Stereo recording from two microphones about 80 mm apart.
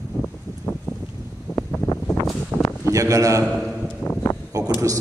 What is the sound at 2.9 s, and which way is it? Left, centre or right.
Speech, right.